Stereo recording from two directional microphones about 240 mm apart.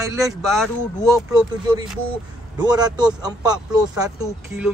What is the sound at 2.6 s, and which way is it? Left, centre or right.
Speech, centre.